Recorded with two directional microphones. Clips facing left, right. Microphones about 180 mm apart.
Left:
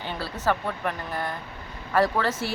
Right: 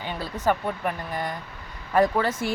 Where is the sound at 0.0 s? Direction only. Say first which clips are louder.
Right 2 dB; 15° right (ahead or behind).